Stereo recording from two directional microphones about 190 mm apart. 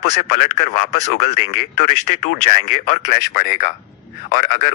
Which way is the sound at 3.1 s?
55° left (ahead or behind).